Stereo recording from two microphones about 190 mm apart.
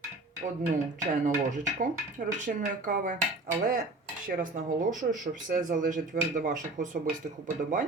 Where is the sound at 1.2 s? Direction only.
45° right (ahead or behind).